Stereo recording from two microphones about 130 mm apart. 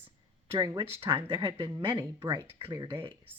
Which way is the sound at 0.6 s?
30° right (ahead or behind).